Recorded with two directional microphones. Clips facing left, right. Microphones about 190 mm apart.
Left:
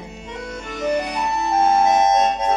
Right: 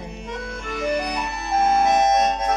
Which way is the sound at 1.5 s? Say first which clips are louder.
Left 1 dB; 25° left (ahead or behind).